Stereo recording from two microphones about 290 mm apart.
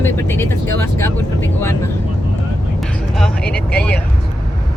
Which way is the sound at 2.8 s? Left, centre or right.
Centre.